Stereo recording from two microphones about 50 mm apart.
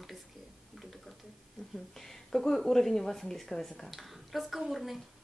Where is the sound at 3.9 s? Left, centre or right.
Centre.